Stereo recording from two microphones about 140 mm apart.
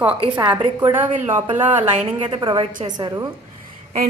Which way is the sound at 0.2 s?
35° right (ahead or behind).